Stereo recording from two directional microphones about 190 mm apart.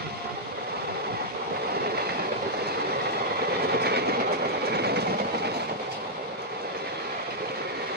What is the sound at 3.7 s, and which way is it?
Train, 55° right (ahead or behind).